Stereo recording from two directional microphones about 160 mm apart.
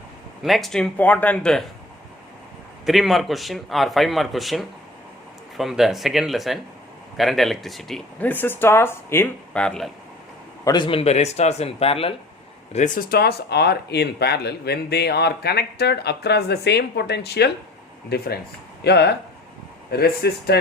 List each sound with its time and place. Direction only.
0.4 s speech: centre (ahead or behind)
2.8 s speech: centre (ahead or behind)
10.6 s speech: 25° left (ahead or behind)
12.7 s speech: 50° left (ahead or behind); by 19.1 s 90° left
19.9 s speech: 80° left